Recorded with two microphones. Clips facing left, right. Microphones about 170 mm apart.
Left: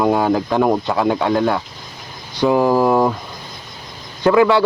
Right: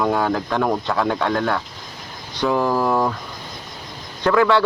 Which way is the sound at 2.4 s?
15° left (ahead or behind).